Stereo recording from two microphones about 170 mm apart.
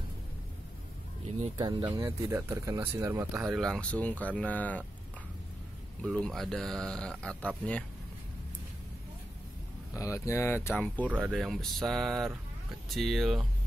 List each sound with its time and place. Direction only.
1.6 s speech: 25° right (ahead or behind)
2.0 s speech: 15° right (ahead or behind)
3.5 s speech: 5° left (ahead or behind)
6.0 s speech: 5° left (ahead or behind)
9.9 s speech: 15° left (ahead or behind)
11.1 s speech: 5° right (ahead or behind)